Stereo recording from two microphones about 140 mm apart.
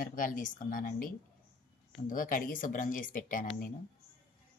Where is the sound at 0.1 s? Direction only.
75° left (ahead or behind).